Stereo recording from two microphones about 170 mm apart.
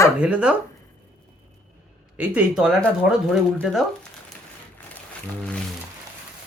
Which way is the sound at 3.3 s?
Centre (ahead or behind).